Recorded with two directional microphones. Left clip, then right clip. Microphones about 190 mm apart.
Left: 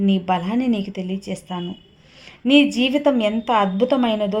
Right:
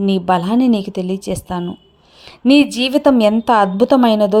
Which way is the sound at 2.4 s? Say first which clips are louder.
Right 3 dB; 25° right (ahead or behind).